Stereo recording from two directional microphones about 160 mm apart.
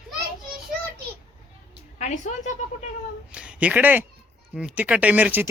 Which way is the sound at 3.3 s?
5° right (ahead or behind).